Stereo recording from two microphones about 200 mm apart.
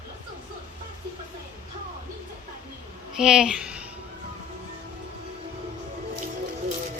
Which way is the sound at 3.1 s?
5° right (ahead or behind).